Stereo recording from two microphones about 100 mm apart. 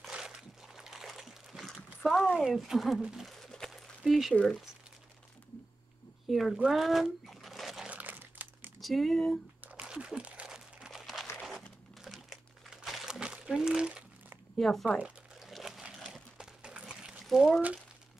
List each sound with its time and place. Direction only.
0.1 s a sound: 5° right (ahead or behind)
2.0 s speech: centre (ahead or behind)
6.2 s crumpling: centre (ahead or behind)
7.9 s crumpling: 15° right (ahead or behind)
8.7 s speech: centre (ahead or behind)
9.6 s crumpling: 15° right (ahead or behind)
14.6 s speech: 5° left (ahead or behind)
15.0 s crumpling: 10° right (ahead or behind)